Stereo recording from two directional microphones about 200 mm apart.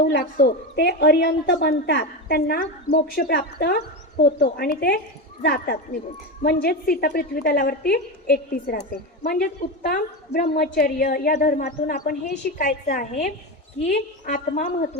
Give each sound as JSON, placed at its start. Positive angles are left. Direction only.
{"t": 0.1, "sound": "a woman's voice", "side_deg": 50}